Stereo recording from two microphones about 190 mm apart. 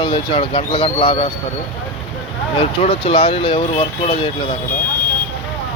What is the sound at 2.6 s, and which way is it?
Speech, 30° left (ahead or behind).